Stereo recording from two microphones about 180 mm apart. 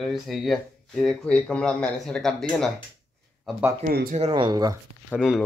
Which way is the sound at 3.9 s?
55° right (ahead or behind).